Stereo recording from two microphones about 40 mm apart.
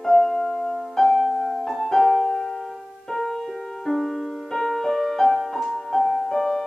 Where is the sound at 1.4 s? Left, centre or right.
Left.